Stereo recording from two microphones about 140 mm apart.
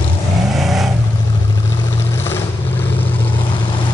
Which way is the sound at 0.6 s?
Centre (ahead or behind).